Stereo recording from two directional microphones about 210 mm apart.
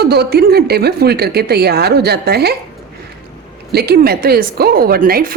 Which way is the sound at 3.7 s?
50° right (ahead or behind).